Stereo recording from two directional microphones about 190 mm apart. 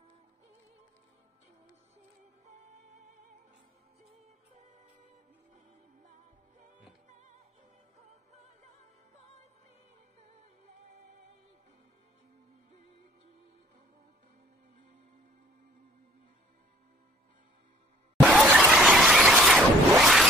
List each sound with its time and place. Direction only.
2.4 s music: 35° right (ahead or behind)
4.6 s music: 40° right (ahead or behind)
7.1 s music: 40° right (ahead or behind)
18.3 s a sound: 5° right (ahead or behind)